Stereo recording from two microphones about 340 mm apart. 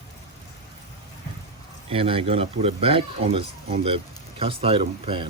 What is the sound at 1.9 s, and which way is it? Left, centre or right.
Speech, centre.